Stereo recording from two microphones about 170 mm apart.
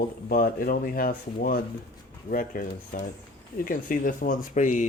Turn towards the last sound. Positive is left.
turn(degrees=45)  # may be behind; listen again after turning